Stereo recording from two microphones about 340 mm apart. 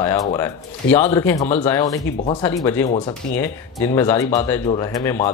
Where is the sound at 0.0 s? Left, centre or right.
Centre.